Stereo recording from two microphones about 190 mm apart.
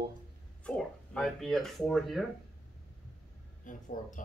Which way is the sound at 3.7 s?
45° left (ahead or behind).